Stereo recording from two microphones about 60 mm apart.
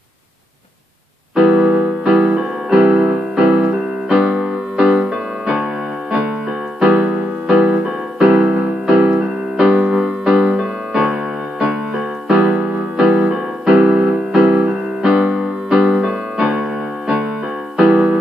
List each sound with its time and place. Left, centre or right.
1.3 s keyboard: centre
6.8 s keyboard: centre
9.2 s music: centre
12.4 s music: right
13.0 s music: centre
17.7 s music: centre